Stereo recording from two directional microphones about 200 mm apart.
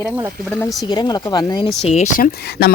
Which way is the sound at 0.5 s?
5° left (ahead or behind).